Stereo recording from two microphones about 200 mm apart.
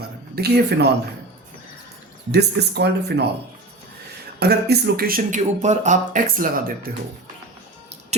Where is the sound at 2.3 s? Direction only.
55° right (ahead or behind).